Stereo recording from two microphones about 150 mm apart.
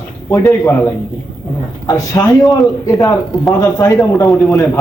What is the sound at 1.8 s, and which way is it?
Speech, 25° left (ahead or behind).